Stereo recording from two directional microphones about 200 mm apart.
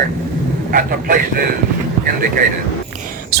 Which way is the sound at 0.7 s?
45° right (ahead or behind).